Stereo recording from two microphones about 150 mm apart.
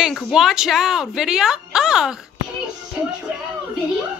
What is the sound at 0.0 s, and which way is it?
A woman's voice, centre (ahead or behind).